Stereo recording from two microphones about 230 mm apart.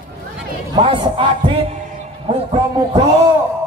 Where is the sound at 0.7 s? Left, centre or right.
Right.